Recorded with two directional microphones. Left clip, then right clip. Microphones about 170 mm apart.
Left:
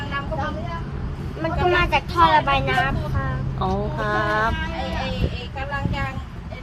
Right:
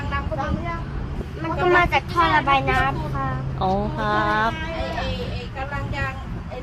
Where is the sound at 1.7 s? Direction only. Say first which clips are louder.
Right 4 dB; 20° right (ahead or behind).